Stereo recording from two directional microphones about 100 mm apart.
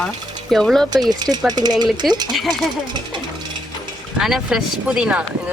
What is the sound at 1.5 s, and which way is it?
Speech, 45° right (ahead or behind).